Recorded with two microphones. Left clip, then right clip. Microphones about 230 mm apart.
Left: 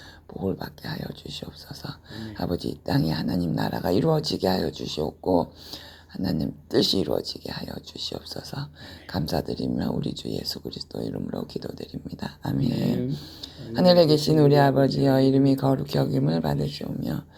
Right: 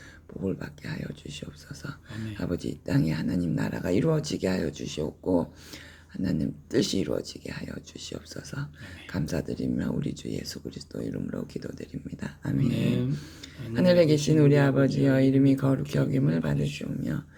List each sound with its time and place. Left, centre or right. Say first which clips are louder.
0.4 s speech: left 3 dB; centre
12.7 s speech: left 2 dB; centre
13.1 s speech: left 3 dB; centre